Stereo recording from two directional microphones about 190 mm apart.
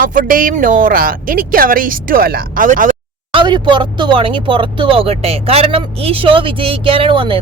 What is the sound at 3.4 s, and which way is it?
Speech, 25° right (ahead or behind).